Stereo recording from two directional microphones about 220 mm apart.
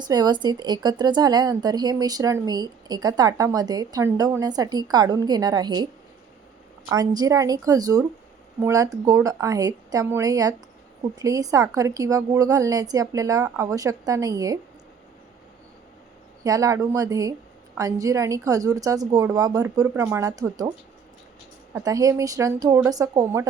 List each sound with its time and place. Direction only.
0.0 s a woman's voice: 20° right (ahead or behind)
16.4 s a woman's voice: 15° right (ahead or behind)